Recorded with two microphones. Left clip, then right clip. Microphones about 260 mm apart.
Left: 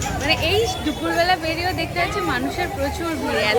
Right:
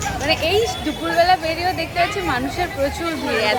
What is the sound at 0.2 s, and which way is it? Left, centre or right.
Speech, centre.